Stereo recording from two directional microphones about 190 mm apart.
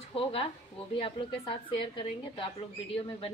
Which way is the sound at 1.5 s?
25° left (ahead or behind).